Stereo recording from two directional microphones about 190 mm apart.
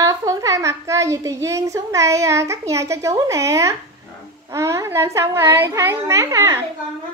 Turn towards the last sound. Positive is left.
turn(degrees=-15)  # may be behind; listen again after turning